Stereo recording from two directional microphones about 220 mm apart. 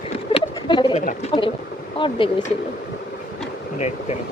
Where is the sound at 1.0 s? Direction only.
25° left (ahead or behind).